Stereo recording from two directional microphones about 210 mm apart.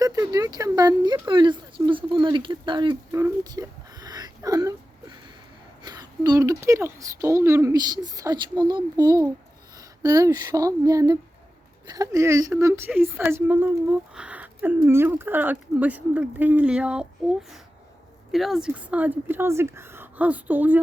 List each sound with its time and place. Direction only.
0.0 s speech: 15° right (ahead or behind)
3.1 s whimper: 15° right (ahead or behind)
5.8 s speech: 20° right (ahead or behind)